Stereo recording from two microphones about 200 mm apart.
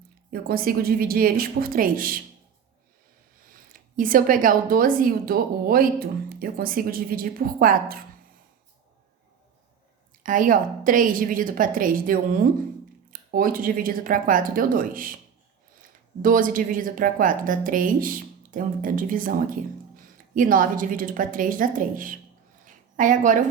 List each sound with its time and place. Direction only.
0.3 s a woman's voice: 45° right (ahead or behind)
3.5 s a woman's voice: 45° right (ahead or behind)
10.2 s a woman's voice: 45° right (ahead or behind)
22.6 s a sound: 40° right (ahead or behind)